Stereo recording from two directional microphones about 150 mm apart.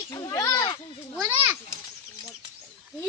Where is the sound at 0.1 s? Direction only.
25° left (ahead or behind).